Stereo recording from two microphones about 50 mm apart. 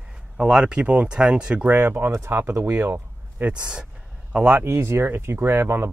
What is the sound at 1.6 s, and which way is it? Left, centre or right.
Speech, right.